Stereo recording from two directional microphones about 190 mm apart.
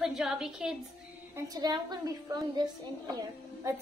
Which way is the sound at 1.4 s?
20° right (ahead or behind).